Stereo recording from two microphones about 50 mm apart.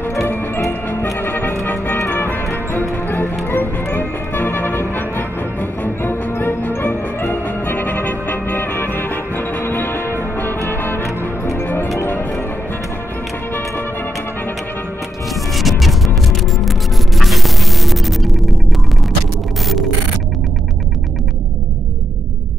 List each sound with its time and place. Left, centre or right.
1.2 s music: left
11.0 s music: left
11.6 s music: left
15.5 s music: centre